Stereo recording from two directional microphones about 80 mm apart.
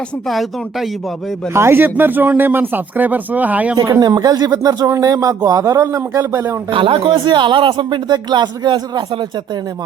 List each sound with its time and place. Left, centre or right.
0.3 s speech: centre
1.5 s speech: right
4.0 s a man's voice: right
6.7 s speech: right